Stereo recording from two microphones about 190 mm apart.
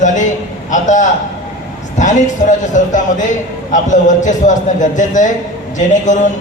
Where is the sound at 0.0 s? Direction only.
40° left (ahead or behind).